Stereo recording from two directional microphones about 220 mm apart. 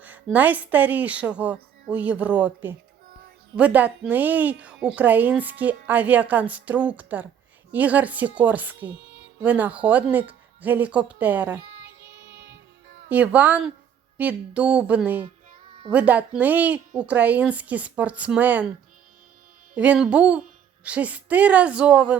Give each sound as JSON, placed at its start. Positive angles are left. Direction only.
{"t": 0.0, "sound": "a woman's voice", "side_deg": -5}
{"t": 12.3, "sound": "music", "side_deg": -50}
{"t": 13.1, "sound": "a woman's voice", "side_deg": -5}
{"t": 19.7, "sound": "a woman's voice", "side_deg": -5}